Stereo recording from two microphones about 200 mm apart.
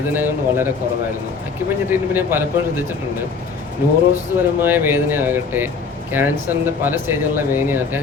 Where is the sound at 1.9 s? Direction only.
10° right (ahead or behind).